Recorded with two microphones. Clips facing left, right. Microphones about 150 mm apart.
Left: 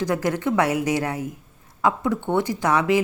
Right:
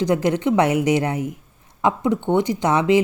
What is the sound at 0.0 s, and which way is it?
Speech, 20° right (ahead or behind).